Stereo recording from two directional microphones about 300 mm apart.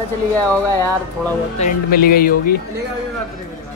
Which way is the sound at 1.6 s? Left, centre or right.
Left.